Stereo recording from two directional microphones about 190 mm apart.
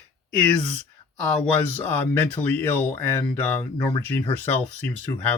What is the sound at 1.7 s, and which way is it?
Speech, 10° left (ahead or behind).